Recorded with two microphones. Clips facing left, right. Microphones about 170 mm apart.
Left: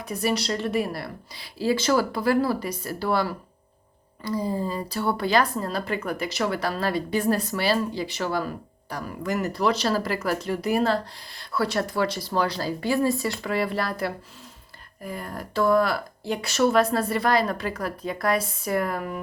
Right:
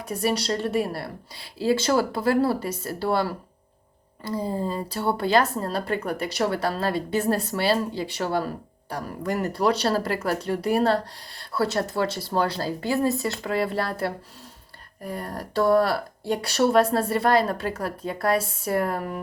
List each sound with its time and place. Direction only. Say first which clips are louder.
0.0 s a woman's voice: right 1 dB; 30° right (ahead or behind)